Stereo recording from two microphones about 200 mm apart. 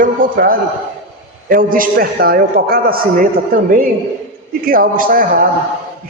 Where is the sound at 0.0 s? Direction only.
45° right (ahead or behind).